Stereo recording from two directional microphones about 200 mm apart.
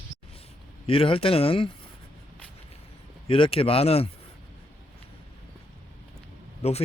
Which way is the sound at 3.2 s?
25° left (ahead or behind).